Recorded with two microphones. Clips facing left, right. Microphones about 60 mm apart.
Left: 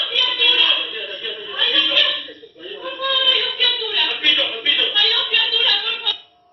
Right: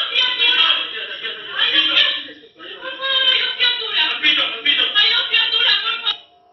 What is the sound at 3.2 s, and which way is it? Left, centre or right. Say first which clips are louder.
Child singing: right 2 dB; right.